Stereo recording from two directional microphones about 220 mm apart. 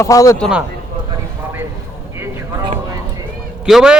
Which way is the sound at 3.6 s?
Centre (ahead or behind).